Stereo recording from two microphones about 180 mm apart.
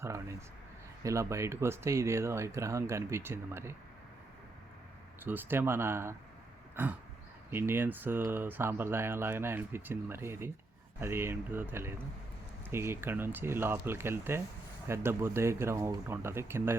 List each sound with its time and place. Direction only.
0.0 s a sound: 15° right (ahead or behind)
1.0 s speech: 15° right (ahead or behind)
5.2 s speech: 10° right (ahead or behind)